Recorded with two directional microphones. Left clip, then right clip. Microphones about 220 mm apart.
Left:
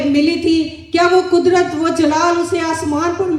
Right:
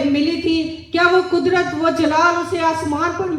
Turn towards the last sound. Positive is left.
turn(degrees=50)  # may be behind; listen again after turning